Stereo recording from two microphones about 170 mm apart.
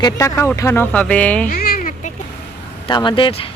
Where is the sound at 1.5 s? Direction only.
60° left (ahead or behind).